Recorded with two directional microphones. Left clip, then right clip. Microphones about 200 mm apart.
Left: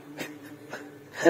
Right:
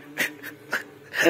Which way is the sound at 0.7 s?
25° right (ahead or behind).